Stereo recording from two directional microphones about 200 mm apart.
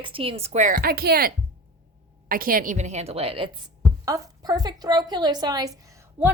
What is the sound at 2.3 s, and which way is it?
A woman's voice, 45° right (ahead or behind).